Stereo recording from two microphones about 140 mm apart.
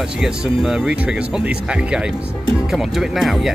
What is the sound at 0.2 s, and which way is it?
Speech, 5° right (ahead or behind).